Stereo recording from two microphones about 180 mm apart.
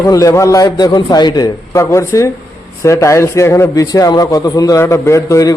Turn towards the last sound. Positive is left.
turn(degrees=15)  # may be behind; listen again after turning